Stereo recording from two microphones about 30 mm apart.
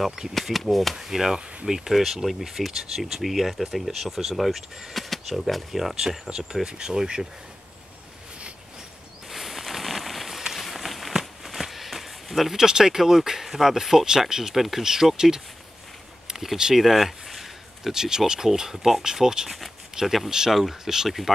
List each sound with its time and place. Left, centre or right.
0.3 s speech: centre
0.9 s speech: centre
5.9 s speech: centre
9.3 s a sound: centre
10.6 s walk: centre
11.1 s a sound: centre
12.5 s speech: centre
16.7 s a sound: centre
17.9 s speech: centre
20.2 s speech: right
20.5 s speech: centre